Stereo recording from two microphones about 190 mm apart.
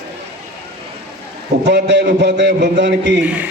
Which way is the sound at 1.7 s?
65° right (ahead or behind).